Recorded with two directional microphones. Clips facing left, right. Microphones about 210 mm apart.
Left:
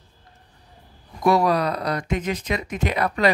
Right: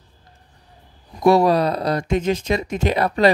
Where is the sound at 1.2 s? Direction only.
30° right (ahead or behind).